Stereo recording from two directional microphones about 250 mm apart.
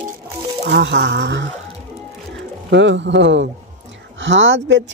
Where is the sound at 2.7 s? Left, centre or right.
Right.